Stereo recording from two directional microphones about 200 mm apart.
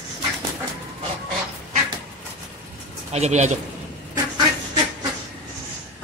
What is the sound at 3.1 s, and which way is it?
Speech, 35° right (ahead or behind).